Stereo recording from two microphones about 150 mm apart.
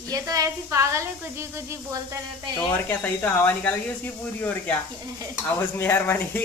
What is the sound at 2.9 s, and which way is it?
Speech, 10° left (ahead or behind).